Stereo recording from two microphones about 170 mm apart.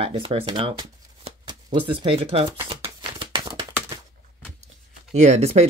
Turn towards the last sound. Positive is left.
turn(degrees=-40)  # may be behind; listen again after turning